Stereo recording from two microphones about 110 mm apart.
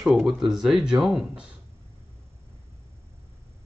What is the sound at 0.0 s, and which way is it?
Speech, centre (ahead or behind).